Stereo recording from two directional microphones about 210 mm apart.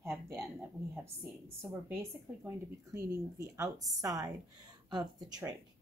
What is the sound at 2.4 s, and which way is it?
Speech, 15° right (ahead or behind).